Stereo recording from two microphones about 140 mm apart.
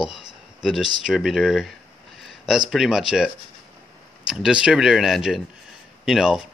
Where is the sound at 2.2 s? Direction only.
Centre (ahead or behind).